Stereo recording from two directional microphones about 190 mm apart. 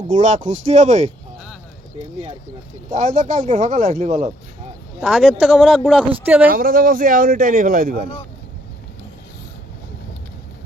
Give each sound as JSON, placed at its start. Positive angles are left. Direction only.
{"t": 0.1, "sound": "speech", "side_deg": -40}
{"t": 2.9, "sound": "speech", "side_deg": -40}
{"t": 4.9, "sound": "speech", "side_deg": 0}
{"t": 6.1, "sound": "speech", "side_deg": -10}
{"t": 6.5, "sound": "a man's voice", "side_deg": -50}